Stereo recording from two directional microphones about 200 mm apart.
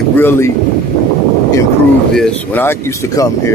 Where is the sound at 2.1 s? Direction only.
5° left (ahead or behind).